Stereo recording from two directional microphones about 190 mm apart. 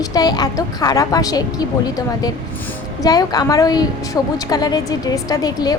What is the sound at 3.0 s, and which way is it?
A woman's voice, 20° left (ahead or behind).